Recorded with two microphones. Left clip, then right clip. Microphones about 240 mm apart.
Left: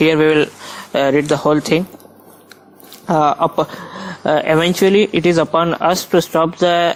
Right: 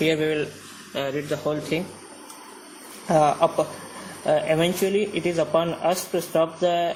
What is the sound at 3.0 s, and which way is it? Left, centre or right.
Speech, left.